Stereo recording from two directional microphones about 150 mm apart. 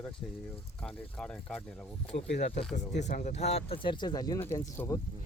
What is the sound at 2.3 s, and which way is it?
Speech, 55° left (ahead or behind).